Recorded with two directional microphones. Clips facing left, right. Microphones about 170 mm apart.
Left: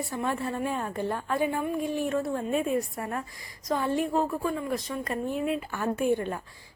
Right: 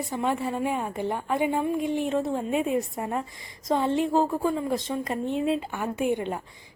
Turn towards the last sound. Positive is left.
turn(degrees=-20)  # may be behind; listen again after turning